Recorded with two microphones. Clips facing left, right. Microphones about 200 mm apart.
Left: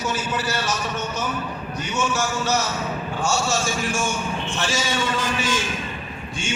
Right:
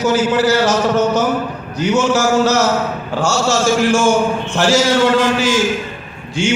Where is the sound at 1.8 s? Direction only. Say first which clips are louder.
Right 11 dB; 85° right.